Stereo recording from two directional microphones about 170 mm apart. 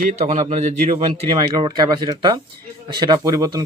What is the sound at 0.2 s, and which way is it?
Speech, 45° right (ahead or behind).